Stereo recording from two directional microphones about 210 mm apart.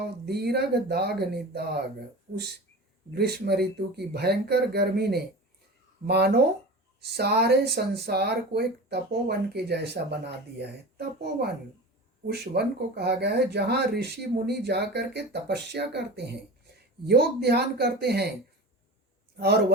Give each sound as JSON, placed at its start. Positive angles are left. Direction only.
{"t": 0.3, "sound": "speech", "side_deg": -50}
{"t": 3.1, "sound": "speech", "side_deg": -50}
{"t": 19.4, "sound": "speech", "side_deg": -50}